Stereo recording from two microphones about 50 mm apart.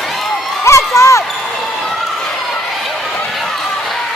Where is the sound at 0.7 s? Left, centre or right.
Left.